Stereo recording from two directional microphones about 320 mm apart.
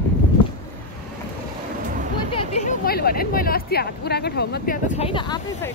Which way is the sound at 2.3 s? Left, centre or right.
Centre.